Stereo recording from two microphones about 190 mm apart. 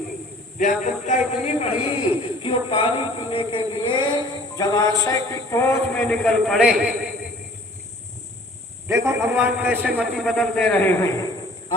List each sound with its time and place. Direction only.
0.6 s a man's voice: 40° left (ahead or behind); by 6.9 s 5° right (ahead or behind)
8.9 s a man's voice: 15° right (ahead or behind); by 11.3 s 15° left (ahead or behind)